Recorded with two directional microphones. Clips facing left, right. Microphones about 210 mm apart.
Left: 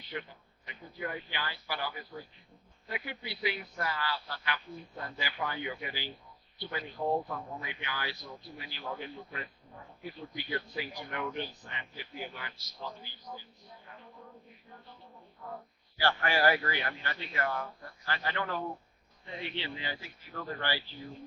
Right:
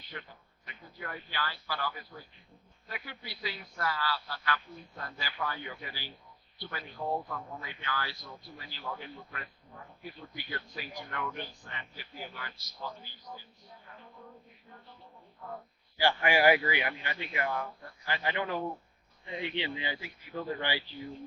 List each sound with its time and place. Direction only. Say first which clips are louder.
0.1 s a sound: left 5 dB; 20° left (ahead or behind)
2.8 s speech: left 4 dB; 20° left (ahead or behind)
16.0 s a man's voice: right 2 dB; 15° right (ahead or behind)